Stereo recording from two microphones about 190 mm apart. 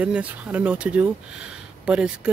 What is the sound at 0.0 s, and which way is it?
Speech, 5° right (ahead or behind).